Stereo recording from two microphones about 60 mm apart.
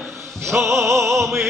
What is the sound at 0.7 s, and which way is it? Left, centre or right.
Music, right.